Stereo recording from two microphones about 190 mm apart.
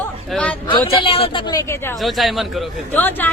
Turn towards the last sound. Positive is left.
turn(degrees=10)  # may be behind; listen again after turning